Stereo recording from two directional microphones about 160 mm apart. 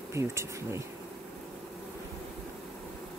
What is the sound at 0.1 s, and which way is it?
Speech, 20° right (ahead or behind).